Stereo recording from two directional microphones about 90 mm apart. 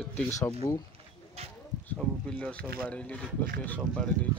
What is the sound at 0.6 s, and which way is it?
Speech, 35° left (ahead or behind).